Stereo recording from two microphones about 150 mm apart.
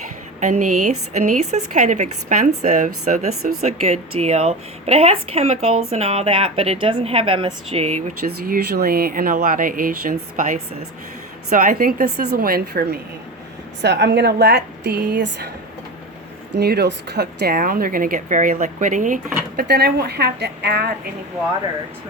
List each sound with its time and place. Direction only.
0.3 s a woman's voice: 55° right (ahead or behind)
8.4 s a woman's voice: 75° right (ahead or behind)
14.1 s a woman's voice: 90° right
16.6 s speech: 90° right